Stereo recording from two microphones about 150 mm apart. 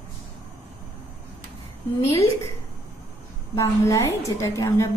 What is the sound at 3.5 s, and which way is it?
A woman's voice, 20° left (ahead or behind).